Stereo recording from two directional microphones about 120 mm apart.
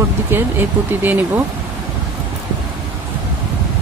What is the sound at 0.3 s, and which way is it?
Speech, 20° right (ahead or behind).